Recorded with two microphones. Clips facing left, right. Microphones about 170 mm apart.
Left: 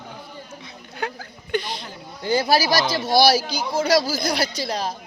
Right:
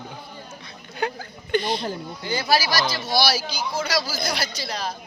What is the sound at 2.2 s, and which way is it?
Speech, 45° left (ahead or behind).